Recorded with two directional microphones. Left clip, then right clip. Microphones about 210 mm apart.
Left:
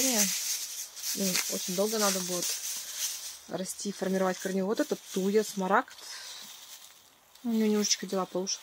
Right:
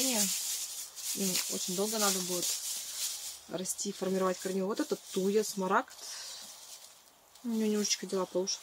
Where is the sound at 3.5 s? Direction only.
40° left (ahead or behind).